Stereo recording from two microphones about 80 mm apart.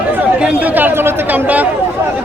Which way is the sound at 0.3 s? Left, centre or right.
Centre.